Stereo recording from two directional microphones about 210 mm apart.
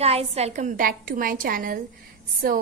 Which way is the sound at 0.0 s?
30° right (ahead or behind).